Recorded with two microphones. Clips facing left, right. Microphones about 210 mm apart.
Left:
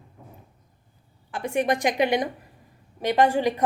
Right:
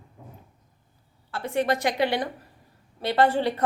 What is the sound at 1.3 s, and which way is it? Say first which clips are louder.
A woman's voice: left 1 dB; 15° left (ahead or behind).